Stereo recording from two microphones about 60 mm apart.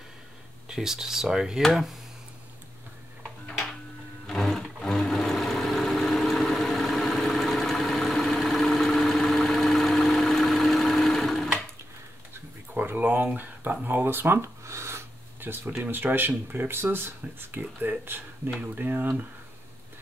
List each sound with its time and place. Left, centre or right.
0.7 s speech: centre
4.3 s vehicle: centre
12.7 s a sound: right
13.8 s speech: right